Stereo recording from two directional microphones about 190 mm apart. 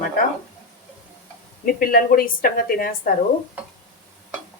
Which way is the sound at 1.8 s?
50° left (ahead or behind).